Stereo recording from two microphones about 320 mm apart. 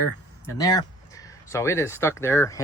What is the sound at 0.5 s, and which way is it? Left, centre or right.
Speech, centre.